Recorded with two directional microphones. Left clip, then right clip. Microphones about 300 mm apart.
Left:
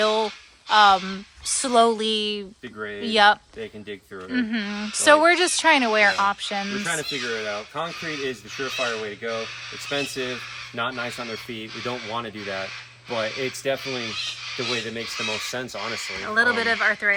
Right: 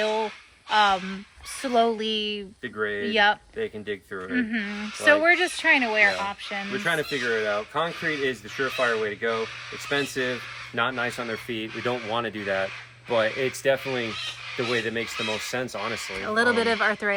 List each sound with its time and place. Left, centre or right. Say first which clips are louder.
0.0 s a sound: left 4 dB; centre
0.7 s speech: left 5 dB; centre
2.7 s speech: right 4 dB; centre
3.1 s speech: left 5 dB; centre
5.8 s speech: left 2 dB; left
6.8 s speech: right 2 dB; centre